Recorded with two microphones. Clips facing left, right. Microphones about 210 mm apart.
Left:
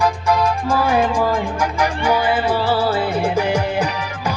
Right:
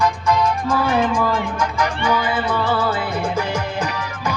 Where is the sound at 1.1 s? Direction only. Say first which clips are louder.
Left 1 dB; 30° left (ahead or behind).